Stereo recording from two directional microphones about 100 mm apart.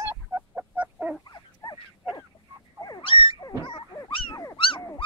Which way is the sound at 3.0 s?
60° left (ahead or behind).